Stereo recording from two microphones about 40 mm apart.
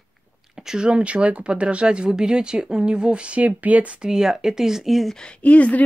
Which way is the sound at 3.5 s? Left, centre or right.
Right.